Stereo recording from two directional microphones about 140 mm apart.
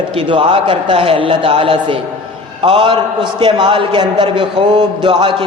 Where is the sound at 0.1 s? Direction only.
40° right (ahead or behind).